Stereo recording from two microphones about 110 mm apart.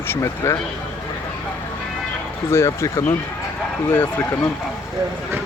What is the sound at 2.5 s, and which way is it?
Speech, 25° left (ahead or behind).